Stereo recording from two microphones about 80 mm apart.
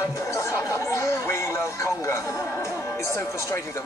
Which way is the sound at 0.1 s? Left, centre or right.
Left.